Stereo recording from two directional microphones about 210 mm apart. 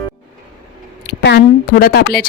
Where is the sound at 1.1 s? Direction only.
50° left (ahead or behind).